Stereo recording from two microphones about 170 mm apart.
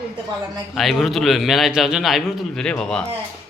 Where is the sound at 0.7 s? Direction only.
Centre (ahead or behind).